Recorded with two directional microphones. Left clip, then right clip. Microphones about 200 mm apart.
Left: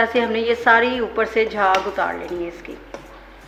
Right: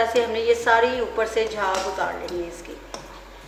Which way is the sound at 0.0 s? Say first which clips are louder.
Left 2 dB; 45° left (ahead or behind).